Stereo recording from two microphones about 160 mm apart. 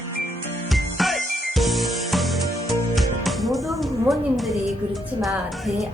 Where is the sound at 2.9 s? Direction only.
Centre (ahead or behind).